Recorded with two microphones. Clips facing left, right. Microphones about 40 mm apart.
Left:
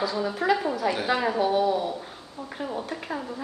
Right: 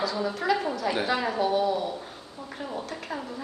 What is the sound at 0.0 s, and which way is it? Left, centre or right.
A woman's voice, centre.